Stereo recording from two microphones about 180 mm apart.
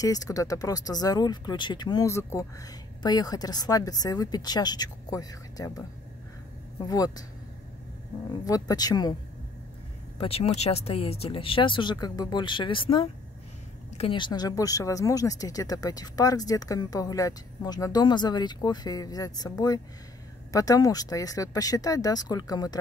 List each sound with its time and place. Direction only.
0.0 s speech: 20° left (ahead or behind)
8.5 s speech: 20° left (ahead or behind)
10.1 s speech: 35° left (ahead or behind)